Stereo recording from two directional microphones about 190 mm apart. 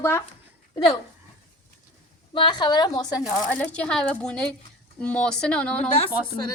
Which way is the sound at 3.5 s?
5° left (ahead or behind).